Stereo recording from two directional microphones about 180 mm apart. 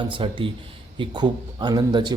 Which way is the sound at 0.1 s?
30° right (ahead or behind).